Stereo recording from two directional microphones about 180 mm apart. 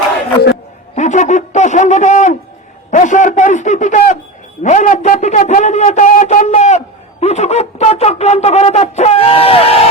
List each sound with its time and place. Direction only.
0.9 s speech: 40° left (ahead or behind)